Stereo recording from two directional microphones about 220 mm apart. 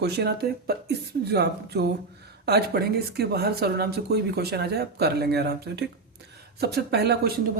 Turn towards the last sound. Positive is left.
turn(degrees=-45)  # may be behind; listen again after turning